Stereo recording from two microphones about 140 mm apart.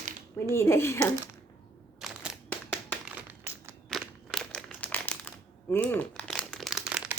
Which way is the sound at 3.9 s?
5° left (ahead or behind).